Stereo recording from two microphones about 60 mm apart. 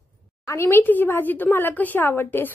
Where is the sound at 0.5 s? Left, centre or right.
Left.